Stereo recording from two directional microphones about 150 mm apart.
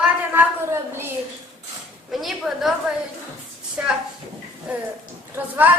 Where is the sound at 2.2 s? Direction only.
Centre (ahead or behind).